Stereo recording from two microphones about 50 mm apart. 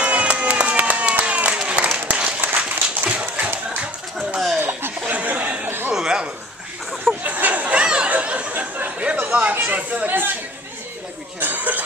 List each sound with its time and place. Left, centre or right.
0.0 s applause: right
2.0 s a sound: right
4.6 s laughter: right
5.0 s chuckle: right
5.9 s a sound: centre
7.2 s chatter: right
8.1 s a sound: right
10.0 s chatter: right
11.3 s cough: right